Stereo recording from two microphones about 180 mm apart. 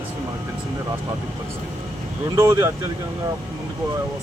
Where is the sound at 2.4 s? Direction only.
15° right (ahead or behind).